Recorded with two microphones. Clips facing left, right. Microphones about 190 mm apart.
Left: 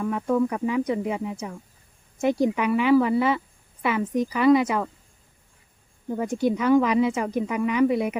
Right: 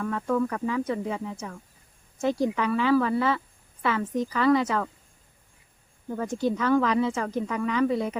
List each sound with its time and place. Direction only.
0.0 s a woman's voice: 15° left (ahead or behind)
6.1 s a woman's voice: 15° left (ahead or behind)